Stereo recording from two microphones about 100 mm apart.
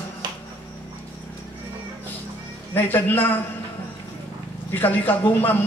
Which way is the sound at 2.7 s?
20° left (ahead or behind).